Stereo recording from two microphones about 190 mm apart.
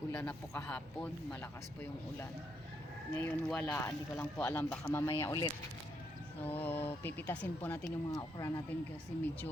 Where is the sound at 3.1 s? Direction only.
10° left (ahead or behind).